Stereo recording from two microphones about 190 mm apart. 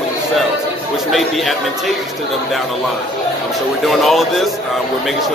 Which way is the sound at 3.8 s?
Centre (ahead or behind).